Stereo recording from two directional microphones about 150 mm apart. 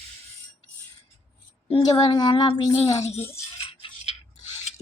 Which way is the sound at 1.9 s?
30° left (ahead or behind).